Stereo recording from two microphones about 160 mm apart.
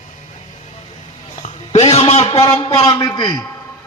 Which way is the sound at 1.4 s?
45° left (ahead or behind).